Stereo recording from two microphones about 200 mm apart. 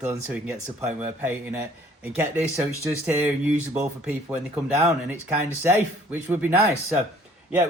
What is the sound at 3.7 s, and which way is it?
Speech, 10° right (ahead or behind).